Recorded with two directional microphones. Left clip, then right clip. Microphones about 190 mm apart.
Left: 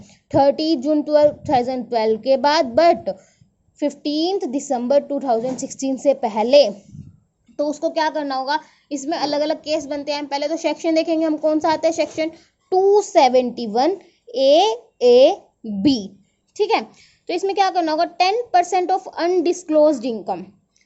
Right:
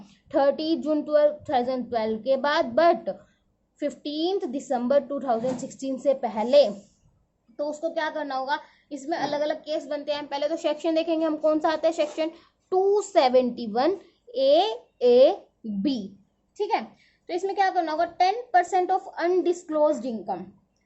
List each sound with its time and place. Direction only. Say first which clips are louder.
0.1 s a child's voice: left 6 dB; 25° left (ahead or behind)
16.6 s a woman's voice: left 7 dB; 45° left (ahead or behind)